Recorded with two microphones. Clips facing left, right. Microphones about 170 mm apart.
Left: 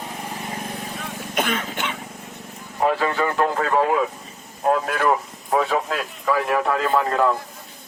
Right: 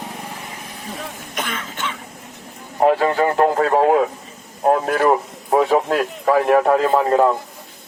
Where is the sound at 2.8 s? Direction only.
40° right (ahead or behind).